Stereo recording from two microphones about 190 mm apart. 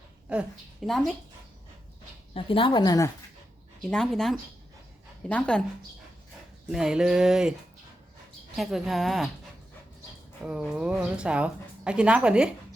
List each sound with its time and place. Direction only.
0.3 s a woman's voice: 5° right (ahead or behind)
2.3 s a woman's voice: 30° left (ahead or behind)
3.8 s a woman's voice: 5° left (ahead or behind)
6.7 s a woman's voice: 5° right (ahead or behind)
8.5 s a woman's voice: centre (ahead or behind)
10.4 s a woman's voice: 5° right (ahead or behind)